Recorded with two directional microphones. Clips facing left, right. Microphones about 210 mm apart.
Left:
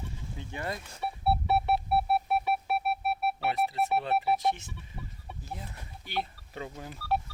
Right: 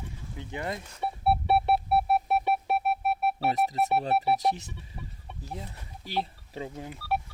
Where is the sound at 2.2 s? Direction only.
40° right (ahead or behind).